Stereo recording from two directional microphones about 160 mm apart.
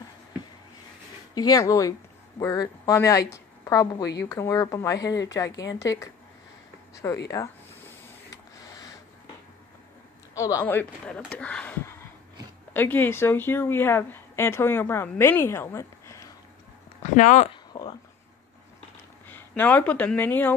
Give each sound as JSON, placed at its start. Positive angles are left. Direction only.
{"t": 1.3, "sound": "a woman's voice", "side_deg": 25}
{"t": 10.3, "sound": "a woman's voice", "side_deg": 20}
{"t": 17.0, "sound": "speech", "side_deg": 50}
{"t": 17.5, "sound": "a sound", "side_deg": 30}
{"t": 19.2, "sound": "speech", "side_deg": 10}